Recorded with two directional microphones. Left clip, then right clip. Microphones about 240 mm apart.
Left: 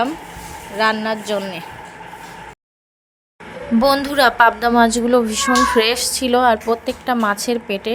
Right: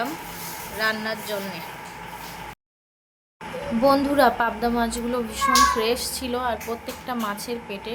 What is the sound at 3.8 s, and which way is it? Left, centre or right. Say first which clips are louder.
A woman's voice: left 4 dB; left.